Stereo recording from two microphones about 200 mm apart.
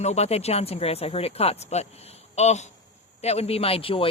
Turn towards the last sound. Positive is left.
turn(degrees=25)  # may be behind; listen again after turning